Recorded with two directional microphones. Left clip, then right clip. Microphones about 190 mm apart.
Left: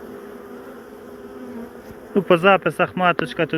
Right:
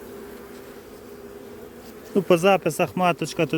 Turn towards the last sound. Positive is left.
turn(degrees=-40)  # may be behind; listen again after turning